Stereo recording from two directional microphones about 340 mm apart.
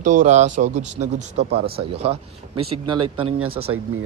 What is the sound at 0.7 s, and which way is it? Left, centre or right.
Speech, right.